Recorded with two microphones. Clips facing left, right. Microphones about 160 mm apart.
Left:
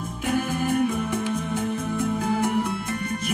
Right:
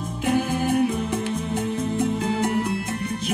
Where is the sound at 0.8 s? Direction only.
50° left (ahead or behind).